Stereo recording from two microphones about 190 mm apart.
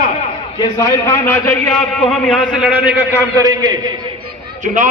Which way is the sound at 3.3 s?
20° right (ahead or behind).